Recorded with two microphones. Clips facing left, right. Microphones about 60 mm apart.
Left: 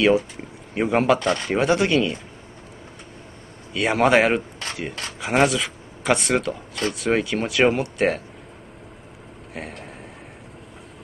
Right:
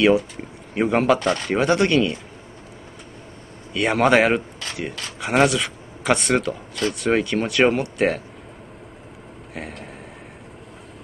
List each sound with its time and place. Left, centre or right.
0.0 s speech: centre
3.7 s speech: centre
9.5 s speech: centre